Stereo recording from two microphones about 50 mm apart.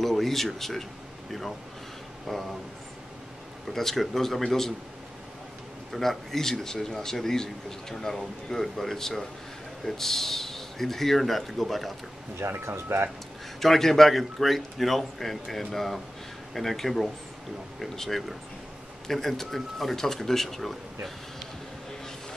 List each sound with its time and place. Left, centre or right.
0.0 s speech: centre
2.2 s speech: centre
3.6 s a man's voice: centre
5.9 s a man's voice: centre
12.4 s speech: right
13.6 s a man's voice: centre